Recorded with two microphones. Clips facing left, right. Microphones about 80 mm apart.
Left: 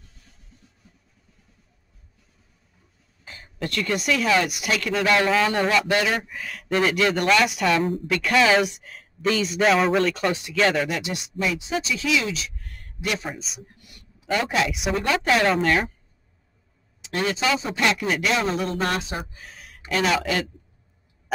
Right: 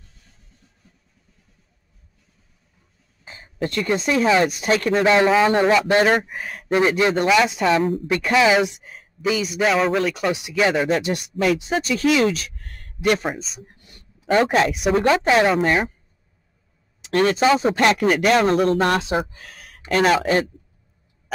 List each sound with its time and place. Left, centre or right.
0.8 s vehicle: centre
3.3 s a sound: right
3.6 s speech: right
7.8 s speech: centre
8.1 s speech: right
10.9 s speech: right
13.4 s speech: centre
13.7 s dog: right
14.3 s speech: right
15.1 s speech: centre
17.0 s speech: right
19.9 s speech: right